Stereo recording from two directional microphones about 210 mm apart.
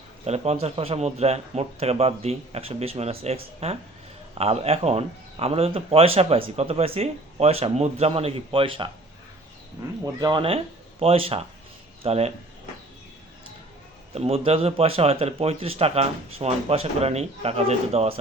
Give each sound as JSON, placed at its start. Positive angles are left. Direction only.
{"t": 0.3, "sound": "speech", "side_deg": -30}
{"t": 14.1, "sound": "speech", "side_deg": -30}